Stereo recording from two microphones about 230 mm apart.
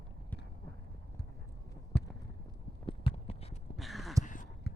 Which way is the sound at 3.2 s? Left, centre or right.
Left.